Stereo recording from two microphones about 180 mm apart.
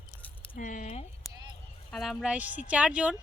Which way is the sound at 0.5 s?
45° left (ahead or behind).